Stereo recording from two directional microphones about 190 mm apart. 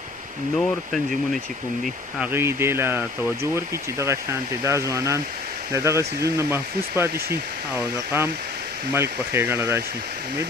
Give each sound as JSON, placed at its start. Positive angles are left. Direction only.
{"t": 0.6, "sound": "speech", "side_deg": 0}
{"t": 2.1, "sound": "speech", "side_deg": -10}